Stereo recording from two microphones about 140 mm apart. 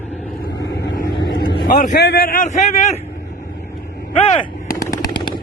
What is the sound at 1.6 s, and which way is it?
A man's voice, 80° left.